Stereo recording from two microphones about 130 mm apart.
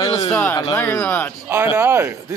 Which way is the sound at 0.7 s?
20° left (ahead or behind).